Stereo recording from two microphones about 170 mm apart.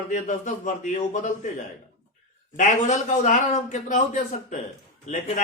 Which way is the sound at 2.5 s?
45° left (ahead or behind).